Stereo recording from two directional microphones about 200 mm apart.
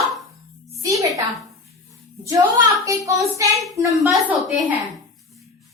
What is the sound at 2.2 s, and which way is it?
A woman's voice, 15° right (ahead or behind).